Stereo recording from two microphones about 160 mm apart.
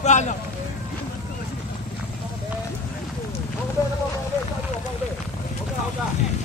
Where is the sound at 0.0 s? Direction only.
50° left (ahead or behind).